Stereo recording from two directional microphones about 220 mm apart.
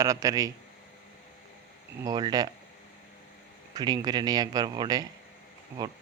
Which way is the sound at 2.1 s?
15° right (ahead or behind).